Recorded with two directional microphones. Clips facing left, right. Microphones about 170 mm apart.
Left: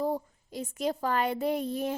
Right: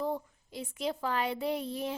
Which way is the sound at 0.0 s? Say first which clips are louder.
Left 3 dB; 40° left (ahead or behind).